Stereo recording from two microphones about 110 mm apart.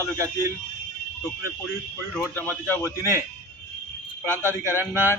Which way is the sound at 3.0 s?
25° right (ahead or behind).